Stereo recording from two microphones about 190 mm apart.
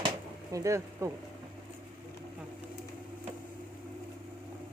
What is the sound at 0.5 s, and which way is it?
Speech, 15° right (ahead or behind).